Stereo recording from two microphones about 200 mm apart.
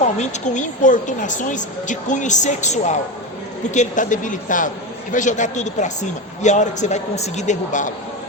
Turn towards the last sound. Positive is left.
turn(degrees=35)  # may be behind; listen again after turning